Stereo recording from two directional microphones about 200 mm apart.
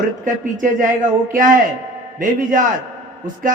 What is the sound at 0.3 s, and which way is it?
Speech, 40° right (ahead or behind).